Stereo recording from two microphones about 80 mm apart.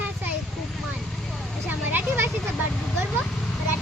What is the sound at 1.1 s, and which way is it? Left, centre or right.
Vehicle, centre.